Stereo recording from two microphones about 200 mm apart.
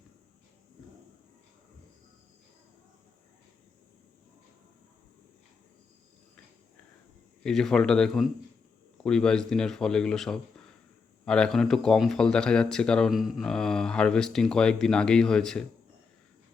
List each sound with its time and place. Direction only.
7.4 s speech: centre (ahead or behind)